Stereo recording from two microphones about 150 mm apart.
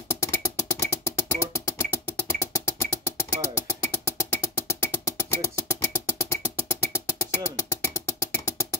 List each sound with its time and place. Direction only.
0.1 s music: 20° left (ahead or behind)